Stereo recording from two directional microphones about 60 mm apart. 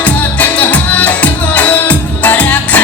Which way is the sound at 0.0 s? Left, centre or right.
Left.